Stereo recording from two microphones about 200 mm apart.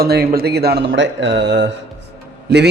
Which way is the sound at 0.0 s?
50° right (ahead or behind).